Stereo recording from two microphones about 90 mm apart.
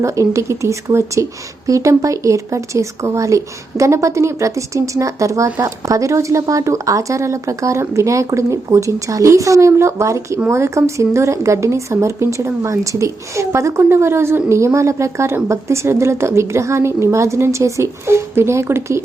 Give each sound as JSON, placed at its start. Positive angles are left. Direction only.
{"t": 0.0, "sound": "a woman's voice", "side_deg": -35}